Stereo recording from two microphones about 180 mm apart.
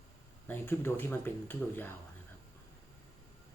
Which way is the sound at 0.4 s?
10° left (ahead or behind).